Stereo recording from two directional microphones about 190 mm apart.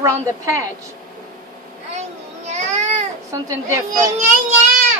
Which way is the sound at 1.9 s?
35° right (ahead or behind).